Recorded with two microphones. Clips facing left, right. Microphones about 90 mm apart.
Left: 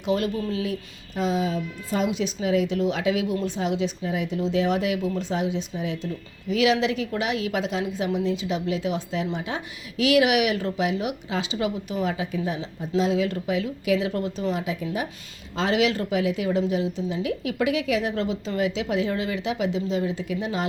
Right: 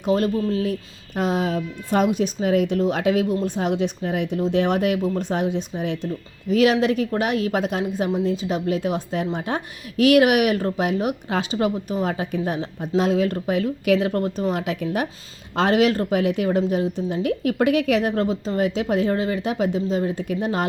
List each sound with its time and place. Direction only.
0.0 s a woman's voice: 40° right (ahead or behind); by 15.0 s 65° right (ahead or behind)
15.5 s a woman's voice: 50° right (ahead or behind)